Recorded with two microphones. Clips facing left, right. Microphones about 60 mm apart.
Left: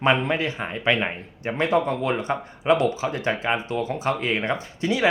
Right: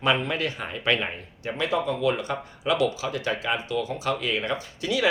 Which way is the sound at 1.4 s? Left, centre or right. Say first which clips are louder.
Left 4 dB; left.